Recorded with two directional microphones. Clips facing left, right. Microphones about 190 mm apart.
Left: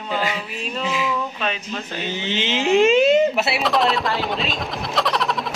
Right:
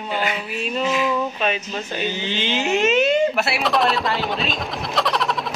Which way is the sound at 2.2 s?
25° left (ahead or behind).